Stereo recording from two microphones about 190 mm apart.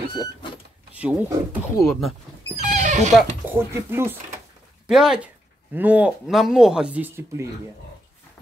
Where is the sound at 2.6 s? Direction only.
40° right (ahead or behind).